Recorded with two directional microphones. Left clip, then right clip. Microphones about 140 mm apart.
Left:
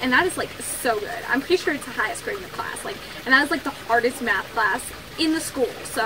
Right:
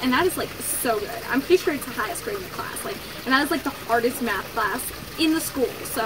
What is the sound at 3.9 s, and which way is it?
Speech, 10° right (ahead or behind).